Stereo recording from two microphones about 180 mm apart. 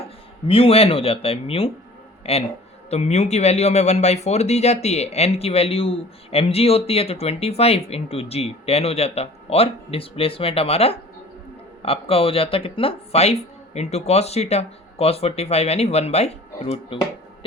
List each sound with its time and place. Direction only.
0.4 s speech: 30° left (ahead or behind)